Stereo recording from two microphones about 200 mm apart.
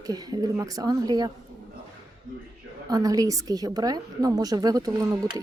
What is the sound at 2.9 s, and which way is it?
Speech, 20° right (ahead or behind).